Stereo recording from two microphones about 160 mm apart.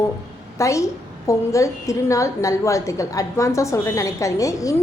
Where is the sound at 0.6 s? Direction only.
20° left (ahead or behind).